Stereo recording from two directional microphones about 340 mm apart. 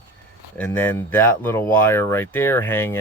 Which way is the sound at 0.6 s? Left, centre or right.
Centre.